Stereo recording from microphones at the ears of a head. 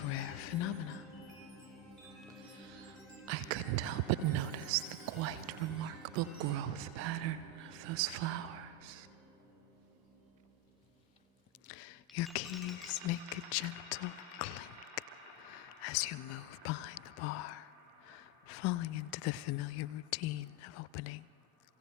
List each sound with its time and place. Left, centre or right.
0.0 s music: left
3.2 s music: right
11.7 s cutlery: left
15.4 s whispering: left